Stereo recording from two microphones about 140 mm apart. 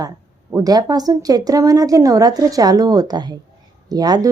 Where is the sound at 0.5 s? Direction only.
25° right (ahead or behind).